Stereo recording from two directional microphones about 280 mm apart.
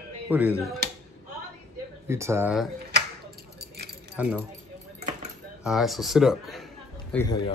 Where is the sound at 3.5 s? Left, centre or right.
Right.